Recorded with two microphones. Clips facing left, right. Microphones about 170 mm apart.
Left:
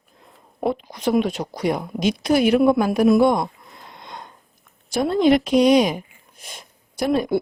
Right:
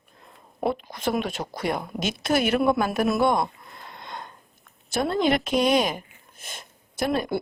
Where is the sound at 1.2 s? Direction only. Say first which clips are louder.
Left 7 dB; 50° right (ahead or behind).